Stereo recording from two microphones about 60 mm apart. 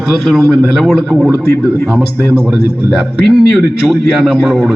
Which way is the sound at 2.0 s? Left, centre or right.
Right.